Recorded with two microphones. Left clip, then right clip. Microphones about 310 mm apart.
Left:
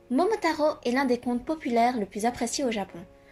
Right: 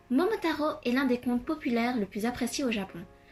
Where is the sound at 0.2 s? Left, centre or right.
Left.